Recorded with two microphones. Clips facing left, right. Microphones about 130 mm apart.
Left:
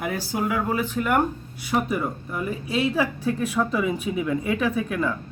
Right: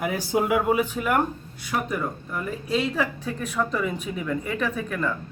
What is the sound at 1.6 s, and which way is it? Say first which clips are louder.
Speech: left 3 dB; 10° left (ahead or behind).